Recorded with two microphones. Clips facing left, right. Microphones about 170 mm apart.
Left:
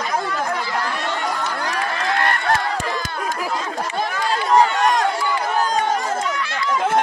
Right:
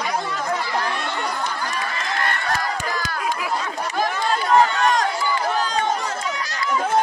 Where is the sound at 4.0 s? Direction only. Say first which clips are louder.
Right 1 dB; 35° left (ahead or behind).